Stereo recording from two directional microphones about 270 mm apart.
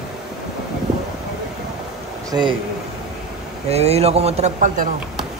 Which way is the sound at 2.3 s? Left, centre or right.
Centre.